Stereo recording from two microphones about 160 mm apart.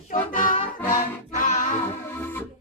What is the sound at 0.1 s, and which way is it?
Music, 55° left (ahead or behind).